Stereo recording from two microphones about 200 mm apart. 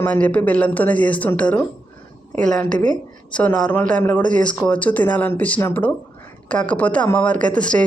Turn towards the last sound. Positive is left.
turn(degrees=5)  # may be behind; listen again after turning